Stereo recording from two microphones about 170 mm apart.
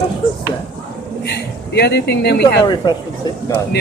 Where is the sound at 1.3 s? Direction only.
75° left (ahead or behind).